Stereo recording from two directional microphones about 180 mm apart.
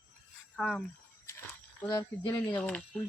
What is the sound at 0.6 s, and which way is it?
Speech, 5° left (ahead or behind).